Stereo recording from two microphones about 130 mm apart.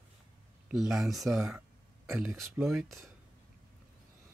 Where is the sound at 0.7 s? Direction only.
5° right (ahead or behind).